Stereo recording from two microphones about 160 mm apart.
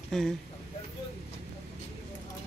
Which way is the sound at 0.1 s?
5° left (ahead or behind).